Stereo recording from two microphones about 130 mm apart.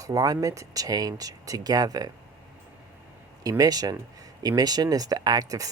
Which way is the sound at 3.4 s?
30° right (ahead or behind).